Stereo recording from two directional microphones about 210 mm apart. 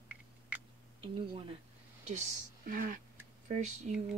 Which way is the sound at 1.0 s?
25° right (ahead or behind).